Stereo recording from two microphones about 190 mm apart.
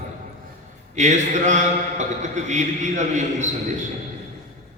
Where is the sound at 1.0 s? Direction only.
40° right (ahead or behind).